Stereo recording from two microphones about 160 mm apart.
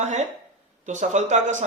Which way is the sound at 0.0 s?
45° right (ahead or behind).